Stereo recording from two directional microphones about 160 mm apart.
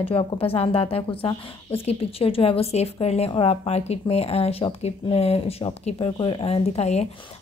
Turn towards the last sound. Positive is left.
turn(degrees=45)  # may be behind; listen again after turning